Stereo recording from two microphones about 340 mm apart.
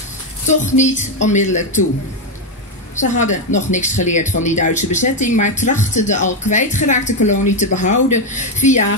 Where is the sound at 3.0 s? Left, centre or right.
Left.